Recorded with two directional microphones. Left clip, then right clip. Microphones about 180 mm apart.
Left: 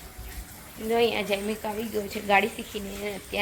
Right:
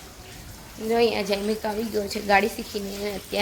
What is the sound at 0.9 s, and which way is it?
A woman's voice, 10° right (ahead or behind).